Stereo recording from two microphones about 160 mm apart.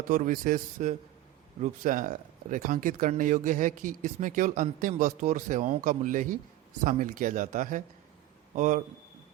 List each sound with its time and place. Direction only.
0.1 s speech: 60° right (ahead or behind)